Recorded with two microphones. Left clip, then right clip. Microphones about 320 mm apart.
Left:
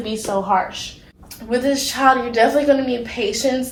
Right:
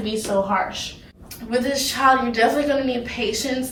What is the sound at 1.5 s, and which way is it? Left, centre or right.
A woman's voice, centre.